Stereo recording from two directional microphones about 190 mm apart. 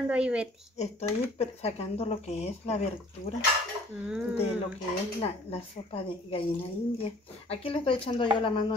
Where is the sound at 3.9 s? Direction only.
10° right (ahead or behind).